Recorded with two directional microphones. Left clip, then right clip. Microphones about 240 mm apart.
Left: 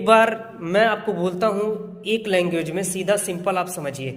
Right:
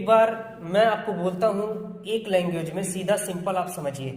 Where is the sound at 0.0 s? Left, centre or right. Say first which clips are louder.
Left 3 dB; left.